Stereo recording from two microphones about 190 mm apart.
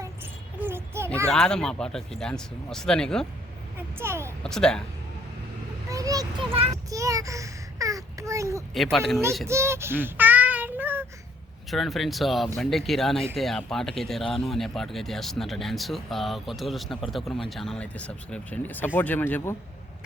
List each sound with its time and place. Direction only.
0.6 s a sound: 15° right (ahead or behind)
1.3 s speech: 5° left (ahead or behind)
3.8 s a child's voice: 10° right (ahead or behind)
4.4 s speech: 5° left (ahead or behind)
5.9 s a child's voice: 20° right (ahead or behind)
6.9 s a child's voice: 15° right (ahead or behind)
8.7 s speech: centre (ahead or behind)
9.5 s child singing: 15° right (ahead or behind)
11.7 s speech: centre (ahead or behind)